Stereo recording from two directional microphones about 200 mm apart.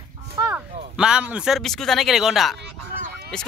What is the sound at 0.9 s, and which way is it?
Speech, 5° right (ahead or behind).